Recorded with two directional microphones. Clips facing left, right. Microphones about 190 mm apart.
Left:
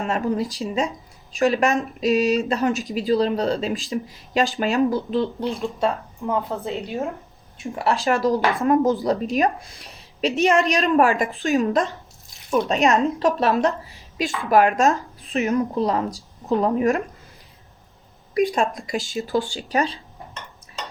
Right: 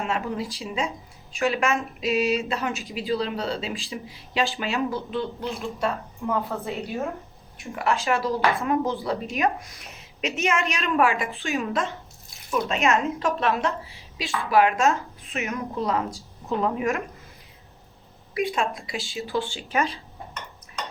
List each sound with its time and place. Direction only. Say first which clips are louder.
0.0 s speech: left 5 dB; 40° left (ahead or behind)
5.8 s a woman's voice: left 3 dB; 20° left (ahead or behind)
7.8 s speech: left 3 dB; 35° left (ahead or behind)
18.3 s speech: left 5 dB; 40° left (ahead or behind)